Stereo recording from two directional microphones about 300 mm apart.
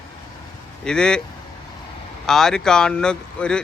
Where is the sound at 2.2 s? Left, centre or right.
Centre.